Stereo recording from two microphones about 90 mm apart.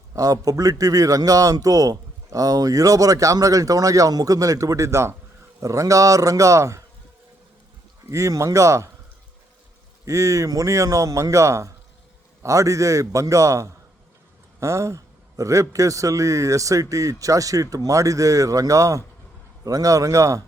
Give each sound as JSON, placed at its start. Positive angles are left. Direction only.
{"t": 0.1, "sound": "a man's voice", "side_deg": -40}
{"t": 8.1, "sound": "a man's voice", "side_deg": -35}
{"t": 10.1, "sound": "a man's voice", "side_deg": -35}